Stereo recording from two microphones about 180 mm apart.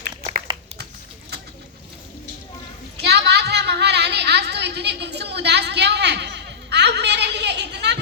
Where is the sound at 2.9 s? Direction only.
65° right (ahead or behind).